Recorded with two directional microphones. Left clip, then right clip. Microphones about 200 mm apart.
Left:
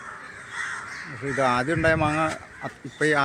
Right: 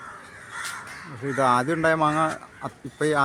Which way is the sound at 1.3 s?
20° right (ahead or behind).